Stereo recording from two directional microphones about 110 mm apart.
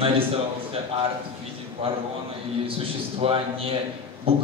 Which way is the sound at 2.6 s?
60° right (ahead or behind).